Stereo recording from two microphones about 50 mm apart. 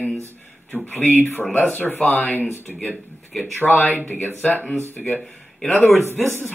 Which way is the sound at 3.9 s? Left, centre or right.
Left.